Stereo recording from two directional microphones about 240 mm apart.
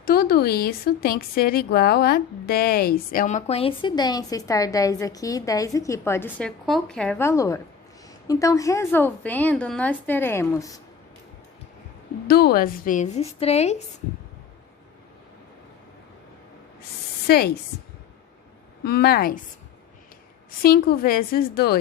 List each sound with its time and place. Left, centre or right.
0.0 s a woman's voice: left; by 10.8 s centre
12.3 s a woman's voice: left
17.2 s speech: left
18.9 s a woman's voice: left
20.6 s a woman's voice: left